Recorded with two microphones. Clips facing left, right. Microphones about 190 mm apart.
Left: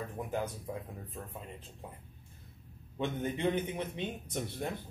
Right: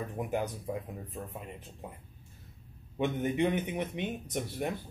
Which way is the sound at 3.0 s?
15° right (ahead or behind).